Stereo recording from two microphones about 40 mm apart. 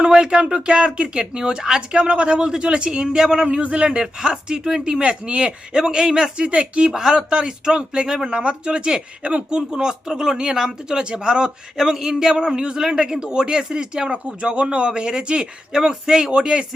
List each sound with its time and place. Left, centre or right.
0.0 s a man's voice: centre
5.7 s a man's voice: centre
6.9 s a man's voice: centre